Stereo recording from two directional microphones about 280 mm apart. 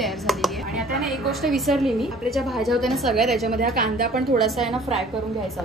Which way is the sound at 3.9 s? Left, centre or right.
Right.